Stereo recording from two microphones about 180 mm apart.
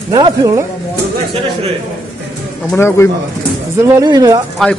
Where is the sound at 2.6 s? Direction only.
15° left (ahead or behind).